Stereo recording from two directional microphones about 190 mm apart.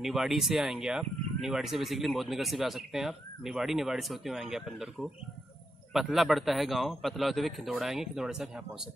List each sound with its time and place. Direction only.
0.0 s speech: centre (ahead or behind)